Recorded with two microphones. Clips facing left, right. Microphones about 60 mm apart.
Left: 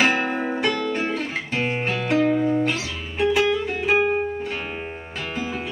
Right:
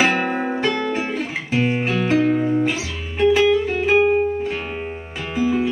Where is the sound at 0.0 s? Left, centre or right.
Centre.